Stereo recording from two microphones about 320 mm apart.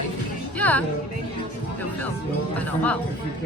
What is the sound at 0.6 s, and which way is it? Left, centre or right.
Speech, centre.